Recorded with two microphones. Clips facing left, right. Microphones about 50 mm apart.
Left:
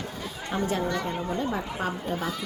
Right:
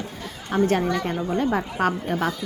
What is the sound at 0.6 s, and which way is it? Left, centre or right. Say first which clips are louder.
A woman's voice: right 6 dB; right.